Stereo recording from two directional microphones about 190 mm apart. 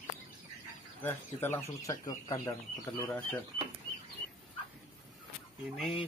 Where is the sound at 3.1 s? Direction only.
10° left (ahead or behind).